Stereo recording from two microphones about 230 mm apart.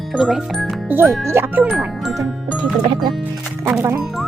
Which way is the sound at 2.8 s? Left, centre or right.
Right.